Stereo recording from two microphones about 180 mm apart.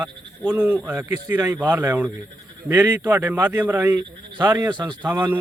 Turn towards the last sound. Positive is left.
turn(degrees=-10)  # may be behind; listen again after turning